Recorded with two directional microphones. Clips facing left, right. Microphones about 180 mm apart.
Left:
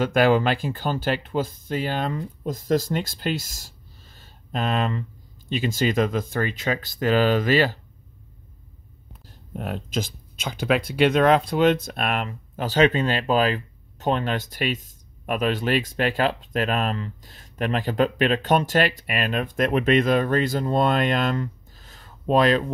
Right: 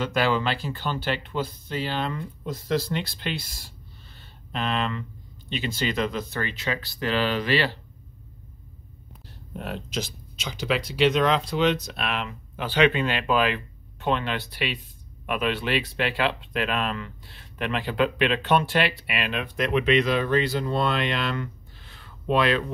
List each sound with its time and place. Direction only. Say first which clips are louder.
0.0 s speech: left 5 dB; 50° left (ahead or behind)
9.6 s speech: left 3 dB; 50° left (ahead or behind)